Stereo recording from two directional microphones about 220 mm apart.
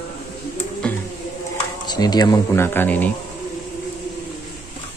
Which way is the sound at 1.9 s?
20° left (ahead or behind).